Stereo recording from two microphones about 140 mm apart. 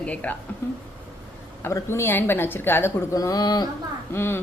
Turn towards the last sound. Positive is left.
turn(degrees=15)  # may be behind; listen again after turning